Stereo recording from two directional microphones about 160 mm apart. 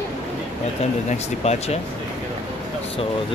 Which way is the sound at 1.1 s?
45° left (ahead or behind).